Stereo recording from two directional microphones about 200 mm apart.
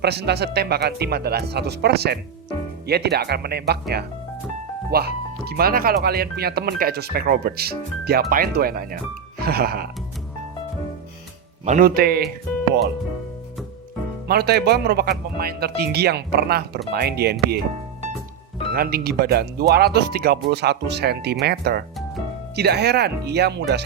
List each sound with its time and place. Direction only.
0.0 s speech: 55° right (ahead or behind)
11.6 s speech: 40° right (ahead or behind)
14.3 s speech: 50° right (ahead or behind)
18.7 s speech: 50° right (ahead or behind)